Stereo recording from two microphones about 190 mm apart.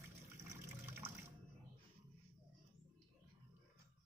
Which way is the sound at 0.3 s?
15° right (ahead or behind).